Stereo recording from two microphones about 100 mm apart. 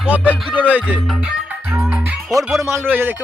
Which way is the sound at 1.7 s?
15° right (ahead or behind).